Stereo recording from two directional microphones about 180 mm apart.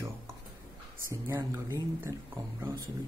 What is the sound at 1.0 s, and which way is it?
Speech, 15° right (ahead or behind).